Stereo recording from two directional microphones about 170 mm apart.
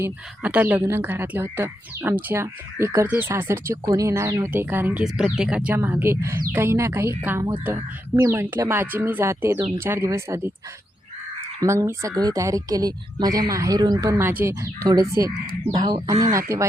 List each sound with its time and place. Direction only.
0.0 s speech: 10° right (ahead or behind)
11.6 s speech: 15° right (ahead or behind)